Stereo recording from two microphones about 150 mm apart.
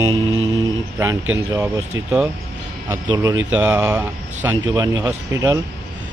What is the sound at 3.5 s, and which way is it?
Speech, 10° right (ahead or behind).